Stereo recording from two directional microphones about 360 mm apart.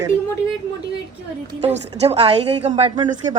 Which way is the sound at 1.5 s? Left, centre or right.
Centre.